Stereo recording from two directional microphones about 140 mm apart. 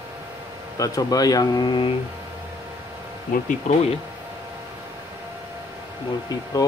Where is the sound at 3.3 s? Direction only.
75° left (ahead or behind).